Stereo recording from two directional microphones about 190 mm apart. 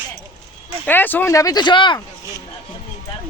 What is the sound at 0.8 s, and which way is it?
A man's voice, 10° left (ahead or behind).